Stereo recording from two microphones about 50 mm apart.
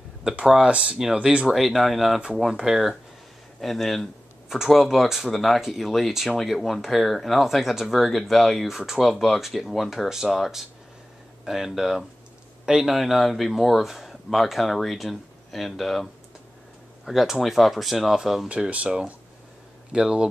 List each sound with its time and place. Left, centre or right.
0.7 s speech: centre
1.5 s speech: centre
4.5 s speech: centre
18.5 s speech: right